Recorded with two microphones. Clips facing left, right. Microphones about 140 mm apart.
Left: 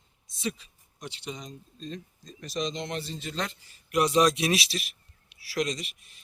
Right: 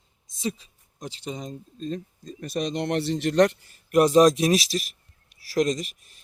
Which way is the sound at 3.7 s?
50° right (ahead or behind).